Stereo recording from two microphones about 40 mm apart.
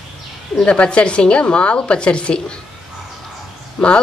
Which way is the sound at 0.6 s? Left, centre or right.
Left.